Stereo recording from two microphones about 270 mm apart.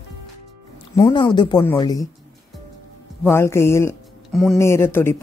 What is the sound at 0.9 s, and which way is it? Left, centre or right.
Speech, centre.